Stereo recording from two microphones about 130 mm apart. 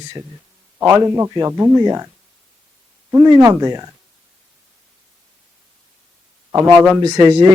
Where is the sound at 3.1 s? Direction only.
25° right (ahead or behind).